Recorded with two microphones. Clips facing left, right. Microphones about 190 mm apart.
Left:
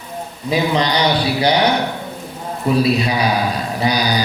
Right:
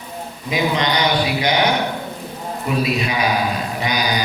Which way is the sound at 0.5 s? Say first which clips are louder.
Left 2 dB; 35° left (ahead or behind).